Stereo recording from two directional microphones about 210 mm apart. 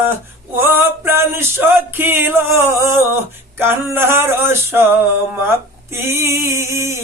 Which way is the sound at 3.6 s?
10° right (ahead or behind).